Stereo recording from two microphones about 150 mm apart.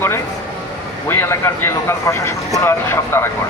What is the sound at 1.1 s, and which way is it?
A man's voice, 15° left (ahead or behind).